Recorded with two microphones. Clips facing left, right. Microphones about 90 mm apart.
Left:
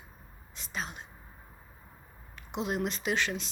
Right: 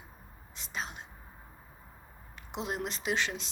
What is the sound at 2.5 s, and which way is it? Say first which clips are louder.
Speech: left 4 dB; 25° right (ahead or behind).